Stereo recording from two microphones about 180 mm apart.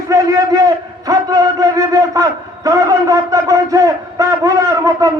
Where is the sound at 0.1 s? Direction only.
15° right (ahead or behind).